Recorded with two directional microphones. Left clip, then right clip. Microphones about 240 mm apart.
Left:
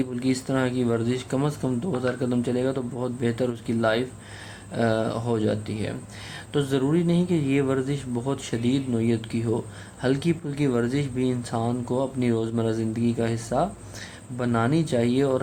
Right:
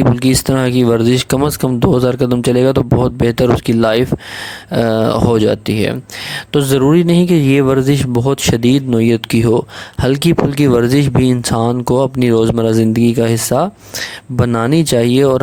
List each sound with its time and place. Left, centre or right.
0.2 s speech: right